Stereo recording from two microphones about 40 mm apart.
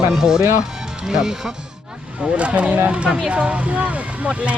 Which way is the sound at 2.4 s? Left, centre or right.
Right.